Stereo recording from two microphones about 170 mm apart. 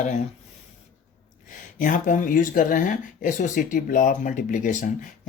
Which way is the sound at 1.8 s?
50° left (ahead or behind).